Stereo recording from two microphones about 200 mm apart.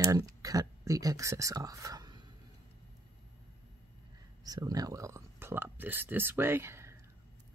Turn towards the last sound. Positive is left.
turn(degrees=-15)  # may be behind; listen again after turning